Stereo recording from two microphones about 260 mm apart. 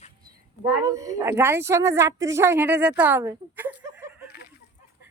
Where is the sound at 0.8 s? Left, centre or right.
Centre.